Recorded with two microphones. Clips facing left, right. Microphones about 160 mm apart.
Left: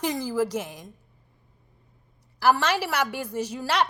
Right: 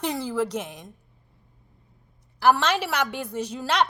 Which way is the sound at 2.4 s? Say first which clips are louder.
Right 1 dB; 10° left (ahead or behind).